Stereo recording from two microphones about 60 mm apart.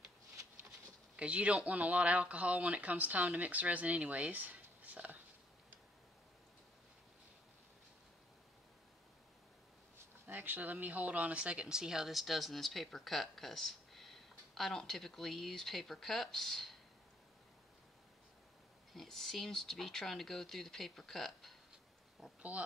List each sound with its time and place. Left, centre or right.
1.1 s speech: right
10.2 s speech: right; by 16.7 s centre
18.9 s speech: centre
22.5 s speech: right